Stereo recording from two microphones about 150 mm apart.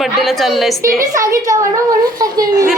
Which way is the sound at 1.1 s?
20° right (ahead or behind).